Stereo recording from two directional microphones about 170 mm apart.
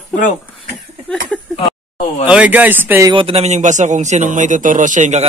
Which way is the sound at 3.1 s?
30° right (ahead or behind).